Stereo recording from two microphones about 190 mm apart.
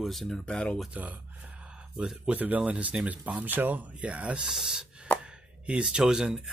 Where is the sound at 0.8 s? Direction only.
10° right (ahead or behind).